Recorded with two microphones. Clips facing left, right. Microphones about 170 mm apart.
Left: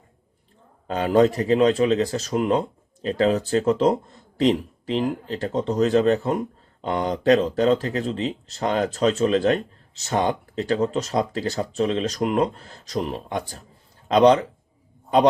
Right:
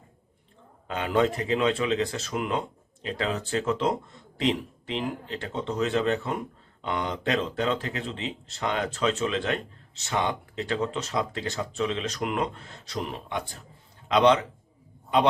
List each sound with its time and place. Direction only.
0.9 s speech: 35° left (ahead or behind)